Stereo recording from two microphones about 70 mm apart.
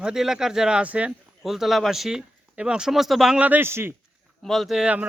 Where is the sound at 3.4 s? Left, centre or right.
Right.